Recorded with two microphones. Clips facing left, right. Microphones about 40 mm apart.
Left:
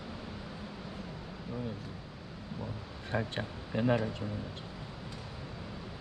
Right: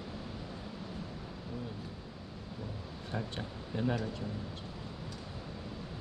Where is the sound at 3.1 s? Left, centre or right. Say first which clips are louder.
Left 5 dB; left.